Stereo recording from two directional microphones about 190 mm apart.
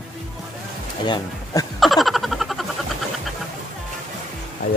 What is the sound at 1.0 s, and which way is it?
Speech, 25° left (ahead or behind).